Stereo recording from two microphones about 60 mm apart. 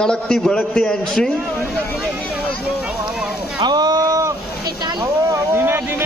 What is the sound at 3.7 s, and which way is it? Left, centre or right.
Boat, right.